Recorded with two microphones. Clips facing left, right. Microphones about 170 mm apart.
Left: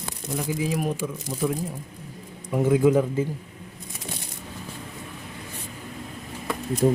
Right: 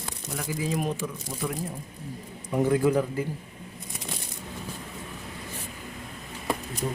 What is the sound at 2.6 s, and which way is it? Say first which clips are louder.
Speech: left 4 dB; 20° left (ahead or behind).